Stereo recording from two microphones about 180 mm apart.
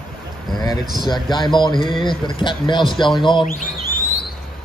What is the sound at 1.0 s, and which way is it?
Speech, 25° left (ahead or behind).